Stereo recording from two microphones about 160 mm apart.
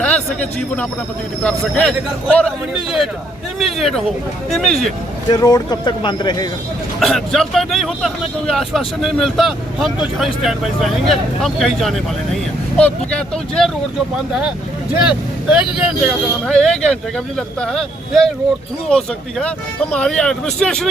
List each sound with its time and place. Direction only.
0.0 s a man's voice: 5° left (ahead or behind)
5.3 s speech: 25° left (ahead or behind)
7.0 s speech: centre (ahead or behind)
15.0 s speech: 5° right (ahead or behind)